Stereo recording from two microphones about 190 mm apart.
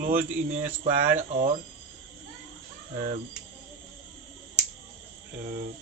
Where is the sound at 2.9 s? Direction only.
35° right (ahead or behind).